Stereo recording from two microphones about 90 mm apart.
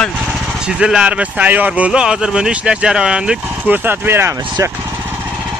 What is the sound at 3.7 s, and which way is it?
Speech, 20° right (ahead or behind).